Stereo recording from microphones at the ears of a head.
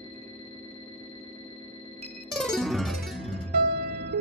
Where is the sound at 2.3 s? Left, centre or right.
Centre.